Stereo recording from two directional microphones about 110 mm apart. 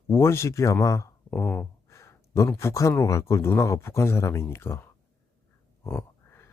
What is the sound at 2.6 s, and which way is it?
Speech, 25° left (ahead or behind).